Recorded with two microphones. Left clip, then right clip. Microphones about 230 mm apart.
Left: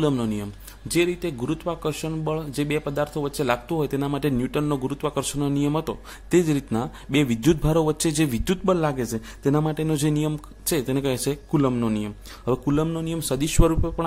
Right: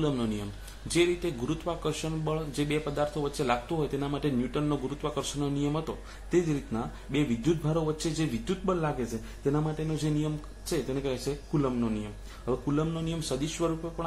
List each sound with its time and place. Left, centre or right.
0.0 s a man's voice: left